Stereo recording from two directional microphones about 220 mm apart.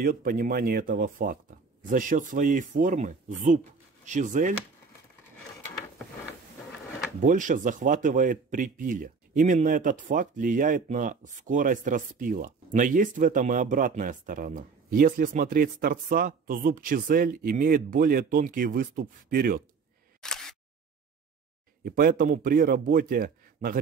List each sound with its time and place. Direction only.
0.0 s speech: 40° right (ahead or behind)
7.2 s speech: 35° right (ahead or behind)
20.2 s single-lens reflex camera: centre (ahead or behind)
21.8 s speech: 40° right (ahead or behind)